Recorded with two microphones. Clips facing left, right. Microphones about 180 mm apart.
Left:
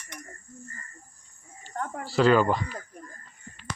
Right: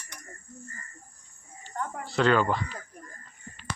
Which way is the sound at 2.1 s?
5° left (ahead or behind).